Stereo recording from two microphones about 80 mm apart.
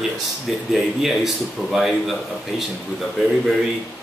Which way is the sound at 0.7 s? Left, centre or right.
Centre.